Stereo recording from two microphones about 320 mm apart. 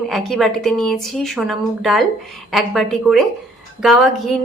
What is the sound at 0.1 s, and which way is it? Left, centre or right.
A woman's voice, centre.